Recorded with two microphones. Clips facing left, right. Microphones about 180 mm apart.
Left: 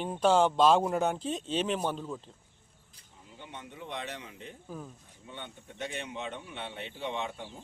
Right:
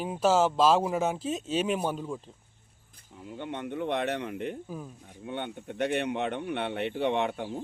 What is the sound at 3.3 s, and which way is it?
Speech, 60° right (ahead or behind).